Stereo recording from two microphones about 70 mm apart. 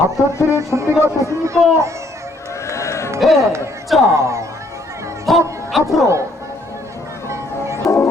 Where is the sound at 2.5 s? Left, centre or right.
Left.